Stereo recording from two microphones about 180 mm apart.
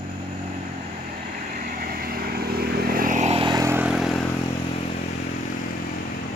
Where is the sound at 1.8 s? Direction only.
55° right (ahead or behind); by 4.2 s centre (ahead or behind).